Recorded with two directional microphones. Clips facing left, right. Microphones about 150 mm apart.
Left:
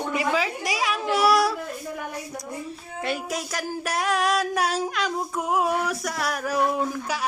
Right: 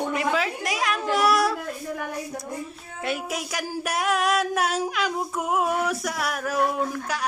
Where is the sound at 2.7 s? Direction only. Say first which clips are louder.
Left 3 dB; centre (ahead or behind).